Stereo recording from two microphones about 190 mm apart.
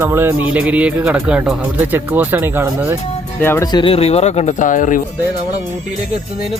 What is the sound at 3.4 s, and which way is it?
Speech, 15° left (ahead or behind).